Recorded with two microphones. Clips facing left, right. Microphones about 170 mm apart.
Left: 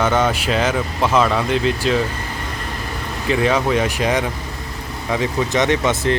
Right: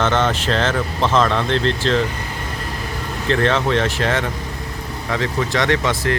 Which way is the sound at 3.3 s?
10° left (ahead or behind).